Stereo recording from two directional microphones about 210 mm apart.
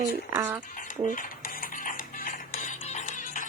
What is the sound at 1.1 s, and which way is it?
Music, 40° left (ahead or behind).